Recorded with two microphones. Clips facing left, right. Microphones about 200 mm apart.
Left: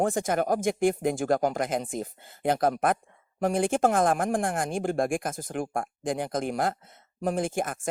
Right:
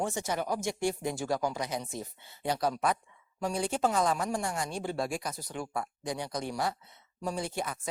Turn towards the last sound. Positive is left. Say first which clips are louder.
# left 6 dB
turn(degrees=50)  # may be behind; listen again after turning